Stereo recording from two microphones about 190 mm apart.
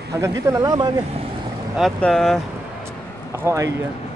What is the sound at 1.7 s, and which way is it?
Speech, centre (ahead or behind).